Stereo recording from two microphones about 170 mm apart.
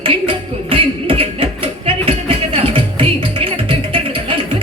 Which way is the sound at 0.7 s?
30° right (ahead or behind).